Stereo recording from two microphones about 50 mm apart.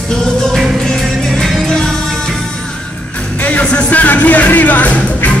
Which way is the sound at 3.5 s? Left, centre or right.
Left.